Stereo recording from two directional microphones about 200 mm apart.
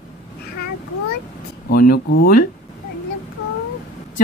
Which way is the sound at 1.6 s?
50° left (ahead or behind).